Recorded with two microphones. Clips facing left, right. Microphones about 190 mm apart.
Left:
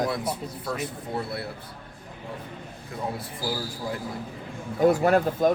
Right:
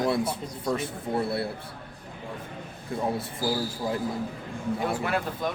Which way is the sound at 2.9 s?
30° right (ahead or behind).